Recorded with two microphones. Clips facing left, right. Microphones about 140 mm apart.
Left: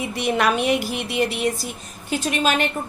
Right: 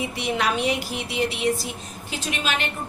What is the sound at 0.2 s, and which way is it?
A woman's voice, 55° left (ahead or behind).